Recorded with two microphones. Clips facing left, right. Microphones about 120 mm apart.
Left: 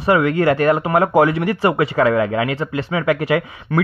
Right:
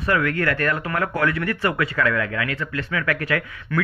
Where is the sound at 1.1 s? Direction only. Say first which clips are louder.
Left 8 dB; 90° left.